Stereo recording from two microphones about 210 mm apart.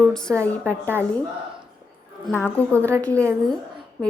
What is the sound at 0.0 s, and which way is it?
A woman's voice, 5° left (ahead or behind).